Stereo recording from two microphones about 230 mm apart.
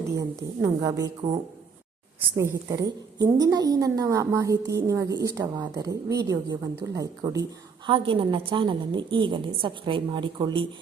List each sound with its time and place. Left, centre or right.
0.2 s a woman's voice: centre
2.6 s a woman's voice: centre